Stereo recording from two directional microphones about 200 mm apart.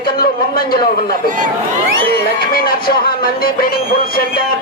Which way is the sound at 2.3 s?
45° left (ahead or behind).